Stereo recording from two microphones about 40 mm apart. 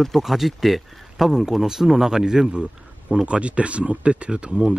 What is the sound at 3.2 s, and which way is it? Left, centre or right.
Speech, right.